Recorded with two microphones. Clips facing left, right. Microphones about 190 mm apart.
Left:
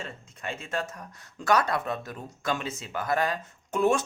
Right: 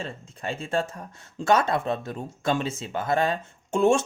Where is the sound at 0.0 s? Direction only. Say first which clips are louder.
Right 4 dB; 30° right (ahead or behind).